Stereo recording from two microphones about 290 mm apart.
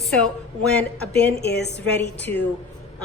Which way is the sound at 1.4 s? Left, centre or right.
Left.